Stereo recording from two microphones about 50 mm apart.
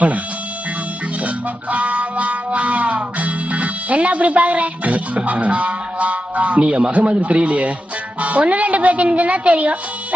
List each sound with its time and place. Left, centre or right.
1.7 s music: right
8.2 s speech: right